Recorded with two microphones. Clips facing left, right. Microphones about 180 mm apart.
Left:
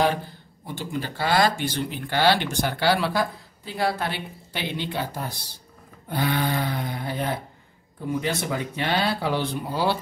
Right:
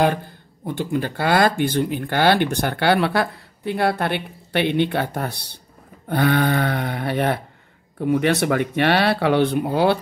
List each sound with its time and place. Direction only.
0.7 s speech: 55° right (ahead or behind)